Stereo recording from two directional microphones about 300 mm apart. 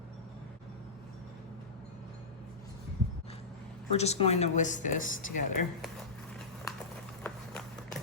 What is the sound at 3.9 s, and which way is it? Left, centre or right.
Speech, left.